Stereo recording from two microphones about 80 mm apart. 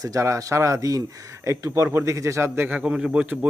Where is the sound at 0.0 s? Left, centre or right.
Right.